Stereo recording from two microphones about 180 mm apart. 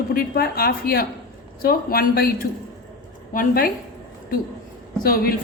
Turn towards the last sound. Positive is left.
turn(degrees=55)  # may be behind; listen again after turning